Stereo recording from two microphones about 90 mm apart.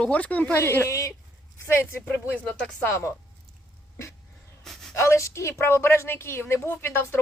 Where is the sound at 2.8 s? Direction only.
35° left (ahead or behind).